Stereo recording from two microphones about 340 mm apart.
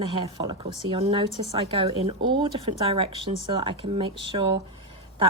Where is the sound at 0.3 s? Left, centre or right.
Centre.